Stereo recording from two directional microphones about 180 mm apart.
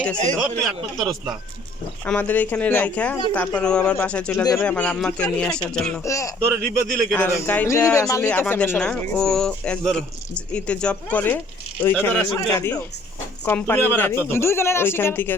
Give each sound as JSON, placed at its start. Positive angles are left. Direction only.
{"t": 0.9, "sound": "speech", "side_deg": -20}
{"t": 2.0, "sound": "speech", "side_deg": 10}
{"t": 6.1, "sound": "speech", "side_deg": 15}